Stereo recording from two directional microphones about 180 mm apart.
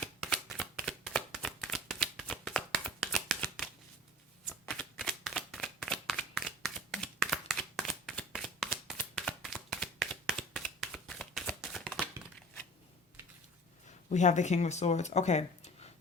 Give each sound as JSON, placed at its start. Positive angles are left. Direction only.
{"t": 0.0, "sound": "shuffling cards", "side_deg": 5}
{"t": 4.7, "sound": "shuffling cards", "side_deg": 5}
{"t": 14.1, "sound": "speech", "side_deg": 40}